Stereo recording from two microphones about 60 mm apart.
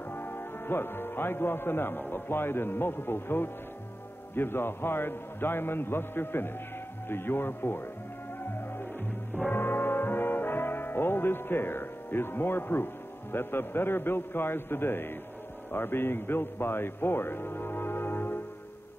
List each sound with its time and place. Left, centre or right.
0.1 s speech: left
8.5 s music: left
9.5 s brass instrument: left
15.7 s a man's voice: left